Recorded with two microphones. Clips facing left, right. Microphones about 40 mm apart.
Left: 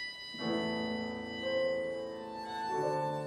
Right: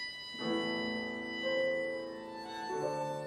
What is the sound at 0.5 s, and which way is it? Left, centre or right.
Music, centre.